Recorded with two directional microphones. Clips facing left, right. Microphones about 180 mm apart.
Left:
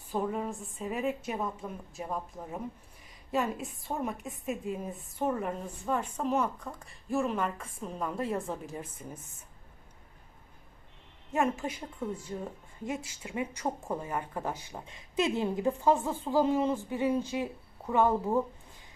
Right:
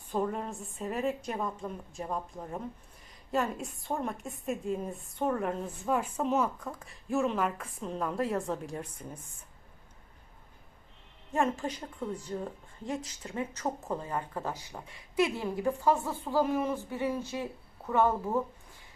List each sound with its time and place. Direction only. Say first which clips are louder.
0.1 s a woman's voice: even; 5° left (ahead or behind)
11.3 s a woman's voice: even; 5° left (ahead or behind)